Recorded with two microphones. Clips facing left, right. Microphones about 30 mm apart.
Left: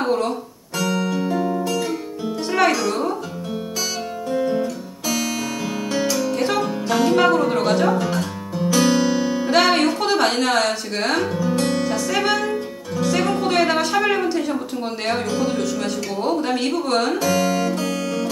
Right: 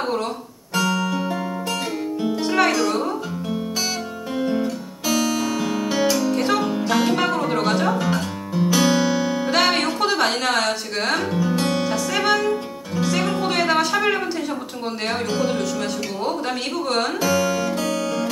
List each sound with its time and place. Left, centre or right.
0.0 s guitar: centre
1.3 s music: centre
2.4 s music: centre
4.3 s guitar: centre
6.1 s music: centre
12.9 s speech: centre
17.7 s music: centre